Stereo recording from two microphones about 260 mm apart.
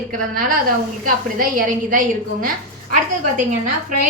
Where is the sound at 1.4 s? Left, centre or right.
Right.